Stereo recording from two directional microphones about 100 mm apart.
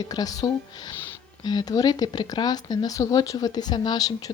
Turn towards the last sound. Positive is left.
turn(degrees=40)  # may be behind; listen again after turning